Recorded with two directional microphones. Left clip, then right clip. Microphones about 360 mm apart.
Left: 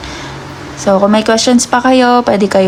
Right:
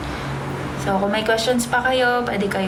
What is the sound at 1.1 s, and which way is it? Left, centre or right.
Speech, centre.